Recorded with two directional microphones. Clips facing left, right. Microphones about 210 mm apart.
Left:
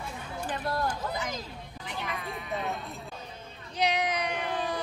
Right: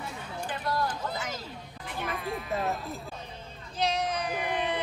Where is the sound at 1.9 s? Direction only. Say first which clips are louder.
Right 3 dB; centre (ahead or behind).